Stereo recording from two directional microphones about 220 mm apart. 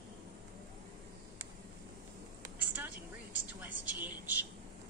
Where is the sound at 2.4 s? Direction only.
10° right (ahead or behind).